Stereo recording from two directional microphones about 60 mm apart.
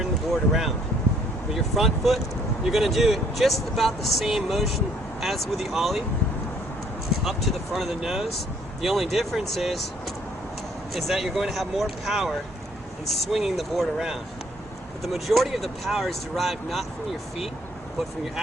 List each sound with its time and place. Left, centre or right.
0.3 s speech: centre
7.3 s speech: centre
10.9 s speech: centre